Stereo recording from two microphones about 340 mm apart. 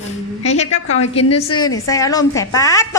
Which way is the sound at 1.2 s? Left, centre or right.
Left.